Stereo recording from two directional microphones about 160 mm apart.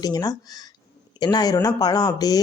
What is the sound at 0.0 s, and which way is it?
Speech, 25° left (ahead or behind).